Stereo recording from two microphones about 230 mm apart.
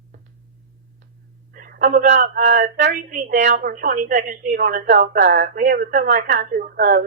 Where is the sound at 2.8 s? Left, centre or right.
Right.